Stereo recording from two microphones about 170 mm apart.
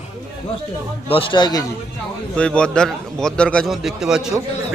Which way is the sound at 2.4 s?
5° left (ahead or behind).